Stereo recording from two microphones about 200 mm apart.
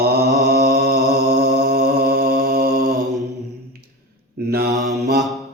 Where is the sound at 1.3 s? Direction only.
55° right (ahead or behind).